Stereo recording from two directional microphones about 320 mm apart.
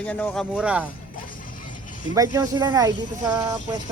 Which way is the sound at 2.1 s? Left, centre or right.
Centre.